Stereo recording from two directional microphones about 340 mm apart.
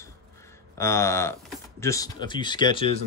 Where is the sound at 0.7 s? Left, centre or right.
Centre.